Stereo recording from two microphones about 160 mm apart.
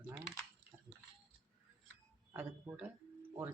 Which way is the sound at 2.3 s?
15° right (ahead or behind).